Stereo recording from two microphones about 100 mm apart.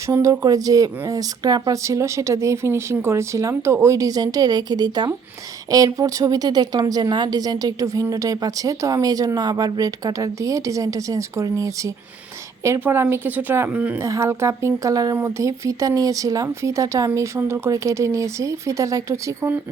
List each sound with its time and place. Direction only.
0.1 s speech: 30° right (ahead or behind); by 13.9 s 15° right (ahead or behind)
14.0 s speech: 30° right (ahead or behind)